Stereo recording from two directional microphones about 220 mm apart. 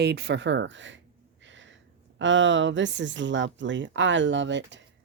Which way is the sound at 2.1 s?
55° right (ahead or behind).